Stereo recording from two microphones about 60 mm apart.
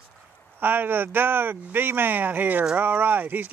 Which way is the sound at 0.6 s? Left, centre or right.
Right.